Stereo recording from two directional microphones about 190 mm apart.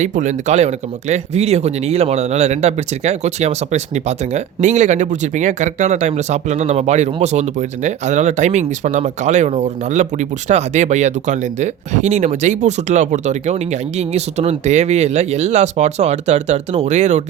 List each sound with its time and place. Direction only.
0.0 s speech: 40° right (ahead or behind)